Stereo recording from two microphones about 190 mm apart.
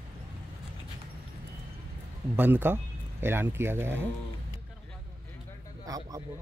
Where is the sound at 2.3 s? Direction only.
10° right (ahead or behind).